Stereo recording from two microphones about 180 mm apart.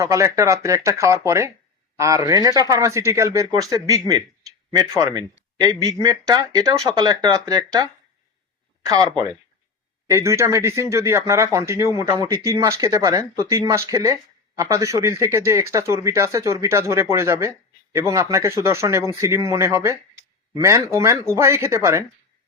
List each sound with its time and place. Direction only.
0.0 s speech: 15° right (ahead or behind)